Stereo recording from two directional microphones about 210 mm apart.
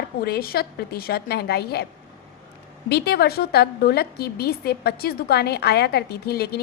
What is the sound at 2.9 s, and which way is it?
A woman's voice, 50° left (ahead or behind).